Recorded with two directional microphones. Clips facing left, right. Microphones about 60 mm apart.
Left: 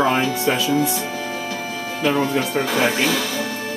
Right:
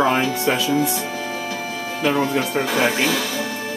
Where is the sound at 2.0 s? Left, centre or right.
Centre.